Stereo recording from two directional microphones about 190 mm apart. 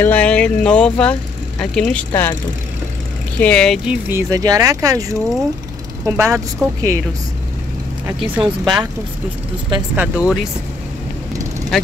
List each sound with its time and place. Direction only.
0.0 s speech: 5° left (ahead or behind)
3.3 s speech: 5° left (ahead or behind); by 7.0 s 15° right (ahead or behind)
8.2 s speech: centre (ahead or behind)
9.9 s speech: 5° right (ahead or behind)